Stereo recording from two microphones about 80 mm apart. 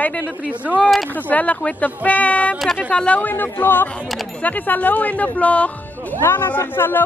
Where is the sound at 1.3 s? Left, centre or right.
Centre.